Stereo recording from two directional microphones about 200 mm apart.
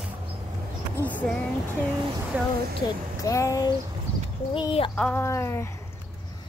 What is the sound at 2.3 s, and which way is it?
Speech, 10° right (ahead or behind).